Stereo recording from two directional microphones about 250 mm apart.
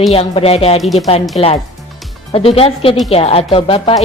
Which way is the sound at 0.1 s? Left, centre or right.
Left.